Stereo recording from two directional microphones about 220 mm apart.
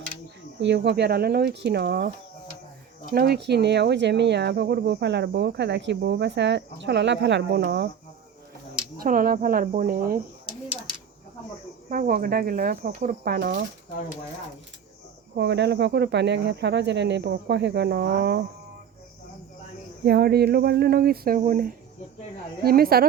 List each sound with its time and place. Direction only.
0.6 s speech: 50° right (ahead or behind)
9.0 s speech: 40° right (ahead or behind)
11.9 s speech: 40° right (ahead or behind)
15.4 s speech: 50° right (ahead or behind)
20.1 s speech: 45° right (ahead or behind)